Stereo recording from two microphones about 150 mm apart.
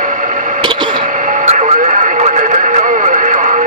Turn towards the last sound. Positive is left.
turn(degrees=-55)  # may be behind; listen again after turning